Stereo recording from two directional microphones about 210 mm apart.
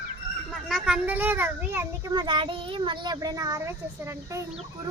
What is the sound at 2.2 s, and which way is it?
A child's voice, 25° right (ahead or behind).